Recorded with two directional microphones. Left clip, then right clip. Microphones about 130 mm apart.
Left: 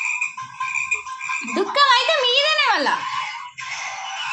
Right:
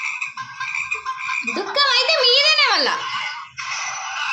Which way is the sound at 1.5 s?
25° right (ahead or behind).